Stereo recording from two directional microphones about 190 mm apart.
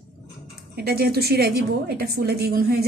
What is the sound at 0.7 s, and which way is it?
A woman's voice, 55° right (ahead or behind).